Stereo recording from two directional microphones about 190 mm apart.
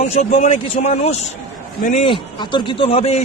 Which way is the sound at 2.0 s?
25° left (ahead or behind).